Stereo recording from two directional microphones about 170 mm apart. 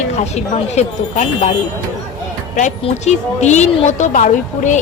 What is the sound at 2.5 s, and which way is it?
A woman's voice, 45° left (ahead or behind).